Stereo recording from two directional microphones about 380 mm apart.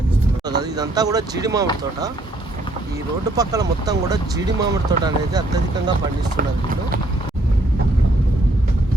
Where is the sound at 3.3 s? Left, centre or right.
Centre.